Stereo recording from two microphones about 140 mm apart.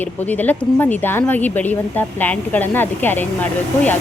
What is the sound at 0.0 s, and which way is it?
A woman's voice, 10° left (ahead or behind).